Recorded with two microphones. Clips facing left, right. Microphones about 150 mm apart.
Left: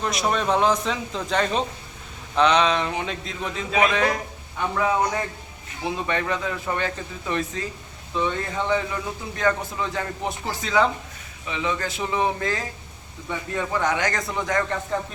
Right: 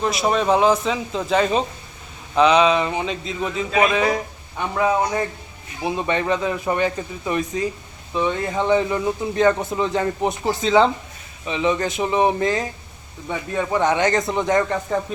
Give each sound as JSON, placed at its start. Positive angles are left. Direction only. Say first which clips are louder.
{"t": 0.0, "sound": "speech", "louder": "right 4 dB", "side_deg": -5}
{"t": 5.8, "sound": "a man's voice", "louder": "right 4 dB", "side_deg": -20}